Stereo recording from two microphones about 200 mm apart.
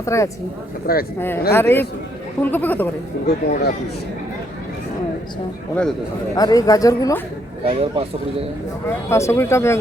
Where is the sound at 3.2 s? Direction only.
55° left (ahead or behind).